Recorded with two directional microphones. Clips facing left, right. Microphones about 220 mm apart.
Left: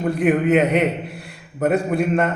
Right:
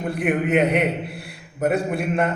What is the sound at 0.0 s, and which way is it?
A man's voice, centre (ahead or behind).